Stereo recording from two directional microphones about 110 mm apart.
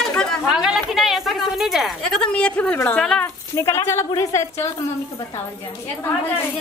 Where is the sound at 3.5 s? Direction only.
25° left (ahead or behind).